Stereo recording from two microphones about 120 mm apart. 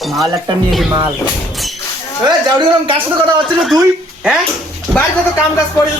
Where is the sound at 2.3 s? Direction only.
40° right (ahead or behind).